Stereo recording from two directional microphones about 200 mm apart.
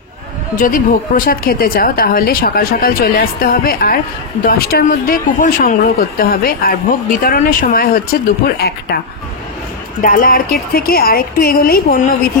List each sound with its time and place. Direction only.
0.6 s a woman's voice: 45° left (ahead or behind)
10.0 s a woman's voice: 45° left (ahead or behind)